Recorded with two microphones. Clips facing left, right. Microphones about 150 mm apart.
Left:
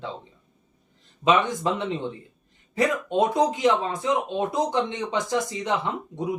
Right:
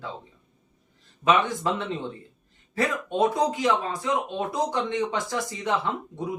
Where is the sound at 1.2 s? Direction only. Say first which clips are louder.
Left 1 dB; 20° left (ahead or behind).